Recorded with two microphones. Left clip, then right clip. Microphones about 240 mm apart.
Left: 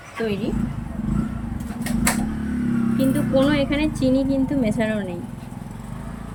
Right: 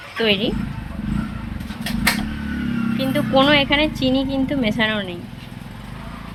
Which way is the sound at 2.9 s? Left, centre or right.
Centre.